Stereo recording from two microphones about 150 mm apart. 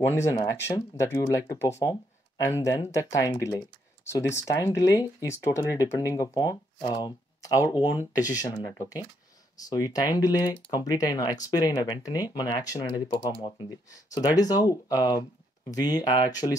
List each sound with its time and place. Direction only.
0.1 s speech: 20° left (ahead or behind)
7.5 s speech: 15° right (ahead or behind)
7.9 s speech: 25° left (ahead or behind)
9.6 s speech: 25° left (ahead or behind)